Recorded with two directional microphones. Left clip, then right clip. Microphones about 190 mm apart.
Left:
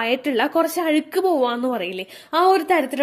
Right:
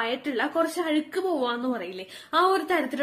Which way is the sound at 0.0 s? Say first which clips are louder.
Left 7 dB; 40° left (ahead or behind).